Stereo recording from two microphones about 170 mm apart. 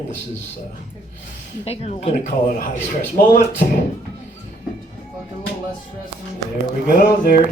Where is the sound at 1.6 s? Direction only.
35° left (ahead or behind).